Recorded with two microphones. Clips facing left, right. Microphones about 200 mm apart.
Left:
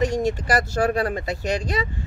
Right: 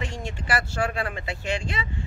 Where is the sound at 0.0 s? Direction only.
40° left (ahead or behind).